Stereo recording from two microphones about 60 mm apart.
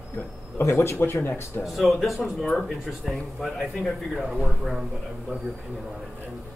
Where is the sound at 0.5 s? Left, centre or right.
Left.